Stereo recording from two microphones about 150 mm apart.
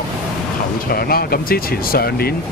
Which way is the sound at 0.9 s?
90° left.